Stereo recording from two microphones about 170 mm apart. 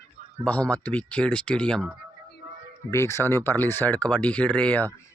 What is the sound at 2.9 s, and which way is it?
Speech, 15° left (ahead or behind).